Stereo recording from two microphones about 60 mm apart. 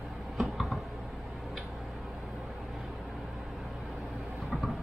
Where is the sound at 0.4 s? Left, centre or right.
Centre.